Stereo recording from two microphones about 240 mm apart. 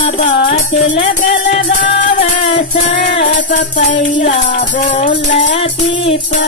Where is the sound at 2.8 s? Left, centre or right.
Left.